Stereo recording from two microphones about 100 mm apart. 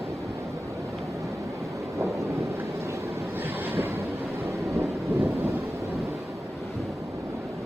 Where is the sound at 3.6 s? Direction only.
20° right (ahead or behind).